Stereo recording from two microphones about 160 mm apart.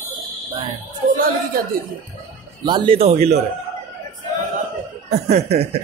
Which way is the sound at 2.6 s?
30° right (ahead or behind).